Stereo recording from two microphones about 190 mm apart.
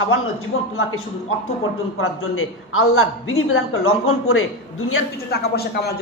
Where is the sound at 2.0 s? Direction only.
90° left.